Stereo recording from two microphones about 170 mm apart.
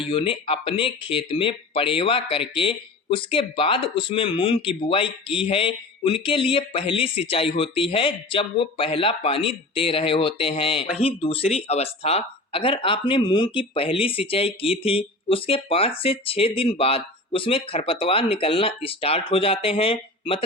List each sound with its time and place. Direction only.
0.0 s speech: 30° left (ahead or behind)